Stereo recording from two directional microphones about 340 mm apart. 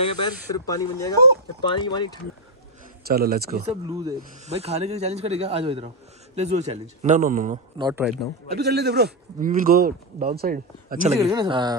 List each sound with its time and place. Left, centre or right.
0.0 s speech: centre
3.1 s a man's voice: right
3.9 s a man's voice: centre
7.9 s a man's voice: centre
8.5 s a man's voice: right
11.1 s speech: centre